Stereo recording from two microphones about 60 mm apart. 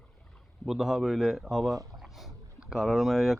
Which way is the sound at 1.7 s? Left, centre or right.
Right.